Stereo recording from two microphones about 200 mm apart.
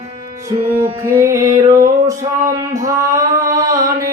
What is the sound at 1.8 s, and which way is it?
Male singing, 15° right (ahead or behind).